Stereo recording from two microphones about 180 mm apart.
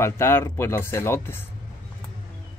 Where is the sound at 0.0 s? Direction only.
15° left (ahead or behind).